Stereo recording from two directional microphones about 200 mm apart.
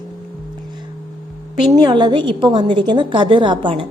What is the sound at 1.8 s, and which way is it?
A woman's voice, 20° right (ahead or behind).